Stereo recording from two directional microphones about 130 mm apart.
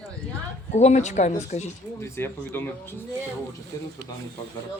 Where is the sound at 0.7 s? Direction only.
60° left (ahead or behind).